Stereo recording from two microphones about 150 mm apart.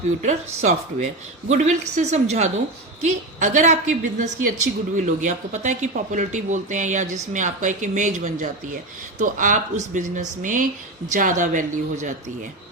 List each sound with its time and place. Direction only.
0.2 s a woman's voice: 55° right (ahead or behind)